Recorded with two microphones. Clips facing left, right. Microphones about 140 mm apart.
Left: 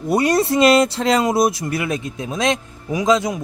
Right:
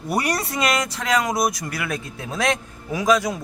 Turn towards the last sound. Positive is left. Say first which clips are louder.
# left 2 dB
turn(degrees=20)  # may be behind; listen again after turning